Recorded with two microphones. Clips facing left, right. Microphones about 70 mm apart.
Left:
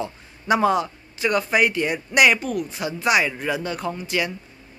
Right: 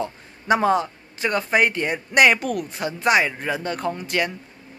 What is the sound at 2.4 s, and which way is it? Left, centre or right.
A man's voice, right.